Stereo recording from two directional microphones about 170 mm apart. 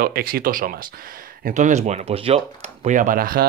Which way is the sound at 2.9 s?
50° right (ahead or behind).